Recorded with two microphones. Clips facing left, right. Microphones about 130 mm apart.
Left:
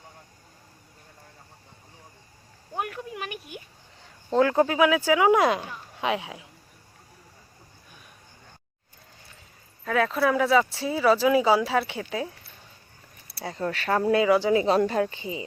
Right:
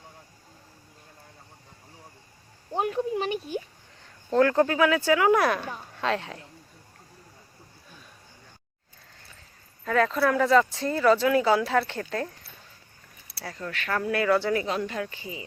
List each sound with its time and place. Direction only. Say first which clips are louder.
2.7 s speech: right 6 dB; 25° right (ahead or behind)
4.3 s speech: even; 10° left (ahead or behind)
9.8 s speech: even; 5° left (ahead or behind)
13.4 s speech: left 6 dB; 30° left (ahead or behind)
13.9 s speech: left 3 dB; 25° left (ahead or behind)
14.8 s speech: left 7 dB; 35° left (ahead or behind)